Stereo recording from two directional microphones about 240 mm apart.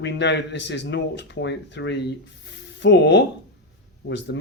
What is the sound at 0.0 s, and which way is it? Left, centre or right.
Speech, left.